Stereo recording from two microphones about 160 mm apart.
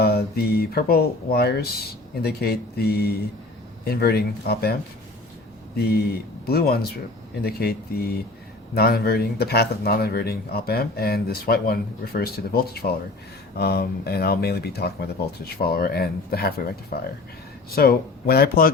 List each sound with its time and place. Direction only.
0.0 s speech: 80° left
15.6 s speech: 70° left (ahead or behind)